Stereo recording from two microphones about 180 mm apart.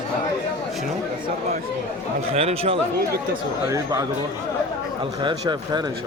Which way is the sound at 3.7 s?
20° right (ahead or behind).